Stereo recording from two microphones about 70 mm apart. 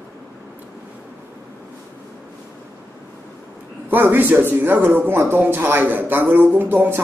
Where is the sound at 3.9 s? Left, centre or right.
Right.